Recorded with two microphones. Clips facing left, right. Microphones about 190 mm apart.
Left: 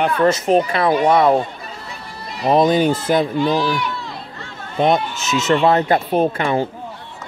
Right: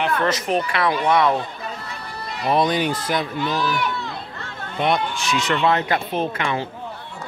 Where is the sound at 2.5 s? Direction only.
40° left (ahead or behind).